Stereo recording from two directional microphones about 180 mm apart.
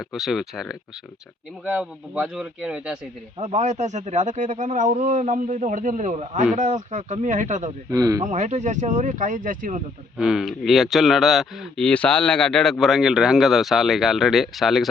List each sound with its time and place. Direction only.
0.0 s speech: centre (ahead or behind)
3.3 s speech: 35° right (ahead or behind)
7.9 s speech: 20° right (ahead or behind)
8.2 s speech: 40° right (ahead or behind)
10.2 s speech: centre (ahead or behind)